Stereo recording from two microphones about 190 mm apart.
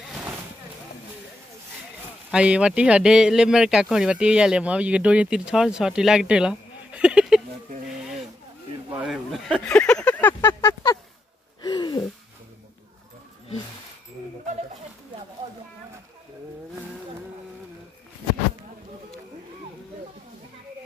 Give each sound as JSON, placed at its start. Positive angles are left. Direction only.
{"t": 0.1, "sound": "vehicle", "side_deg": -5}
{"t": 2.3, "sound": "speech", "side_deg": -5}
{"t": 8.9, "sound": "speech", "side_deg": 0}
{"t": 11.6, "sound": "gasp", "side_deg": 25}